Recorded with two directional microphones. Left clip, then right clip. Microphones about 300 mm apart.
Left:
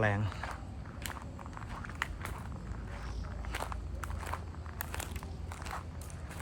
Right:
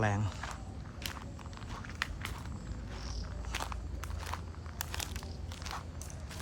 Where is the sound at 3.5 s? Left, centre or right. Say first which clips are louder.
Even; centre.